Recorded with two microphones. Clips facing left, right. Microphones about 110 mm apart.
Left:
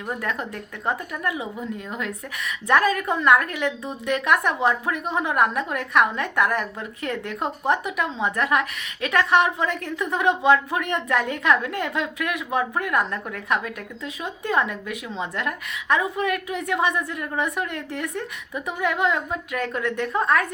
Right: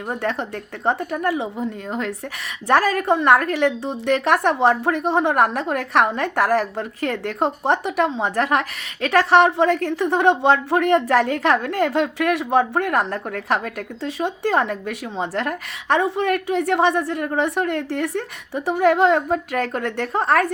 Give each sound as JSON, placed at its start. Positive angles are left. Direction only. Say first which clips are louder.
{"t": 0.1, "sound": "a woman's voice", "louder": "right 4 dB", "side_deg": -30}